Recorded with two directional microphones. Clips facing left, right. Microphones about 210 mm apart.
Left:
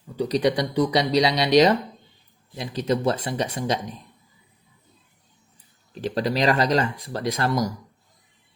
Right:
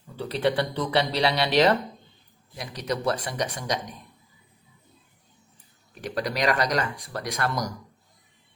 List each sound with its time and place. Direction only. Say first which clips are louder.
0.2 s speech: left 3 dB; 15° left (ahead or behind)
5.9 s speech: left 5 dB; 25° left (ahead or behind)